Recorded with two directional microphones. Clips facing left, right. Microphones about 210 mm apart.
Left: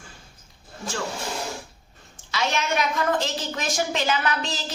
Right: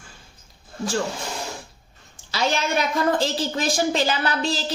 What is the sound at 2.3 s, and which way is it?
A woman's voice, 35° right (ahead or behind).